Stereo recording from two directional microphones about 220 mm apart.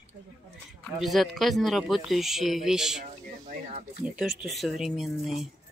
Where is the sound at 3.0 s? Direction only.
35° right (ahead or behind).